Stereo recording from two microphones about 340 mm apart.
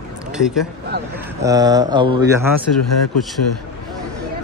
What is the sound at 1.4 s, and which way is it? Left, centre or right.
Speech, centre.